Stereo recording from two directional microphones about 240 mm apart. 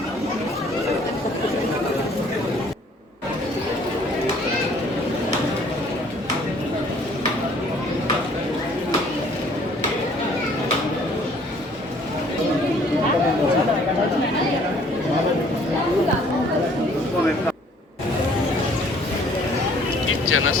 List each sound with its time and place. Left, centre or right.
20.2 s vehicle: left